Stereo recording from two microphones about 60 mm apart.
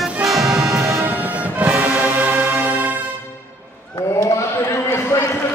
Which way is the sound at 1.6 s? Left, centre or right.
Right.